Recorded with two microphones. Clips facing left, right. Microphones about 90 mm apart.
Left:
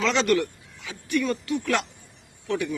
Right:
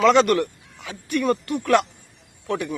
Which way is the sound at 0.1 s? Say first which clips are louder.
Right 5 dB; 50° right (ahead or behind).